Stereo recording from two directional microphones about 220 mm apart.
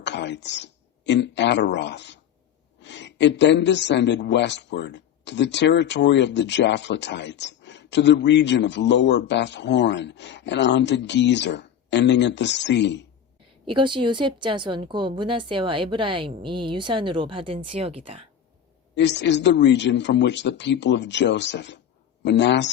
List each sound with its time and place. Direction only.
0.0 s a man's voice: 50° left (ahead or behind)
13.7 s a woman's voice: 20° right (ahead or behind)
18.9 s a man's voice: 50° left (ahead or behind)